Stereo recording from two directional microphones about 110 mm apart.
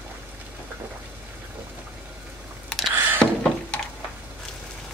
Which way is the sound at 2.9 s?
20° right (ahead or behind).